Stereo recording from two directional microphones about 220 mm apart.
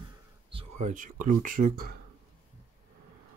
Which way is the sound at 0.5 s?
35° right (ahead or behind).